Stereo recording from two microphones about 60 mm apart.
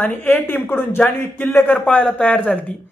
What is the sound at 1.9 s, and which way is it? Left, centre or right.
Speech, left.